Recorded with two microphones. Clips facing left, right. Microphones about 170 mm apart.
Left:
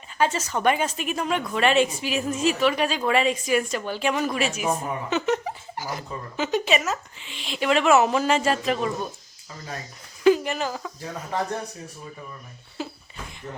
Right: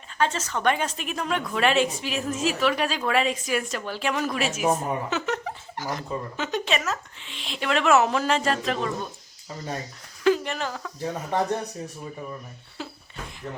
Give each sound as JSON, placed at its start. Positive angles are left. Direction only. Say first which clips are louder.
{"t": 0.2, "sound": "a woman's voice", "louder": "left 2 dB", "side_deg": 10}
{"t": 10.2, "sound": "speech", "louder": "left 3 dB", "side_deg": 5}
{"t": 11.0, "sound": "speech", "louder": "right 4 dB", "side_deg": -25}
{"t": 12.8, "sound": "a sound", "louder": "left 4 dB", "side_deg": 5}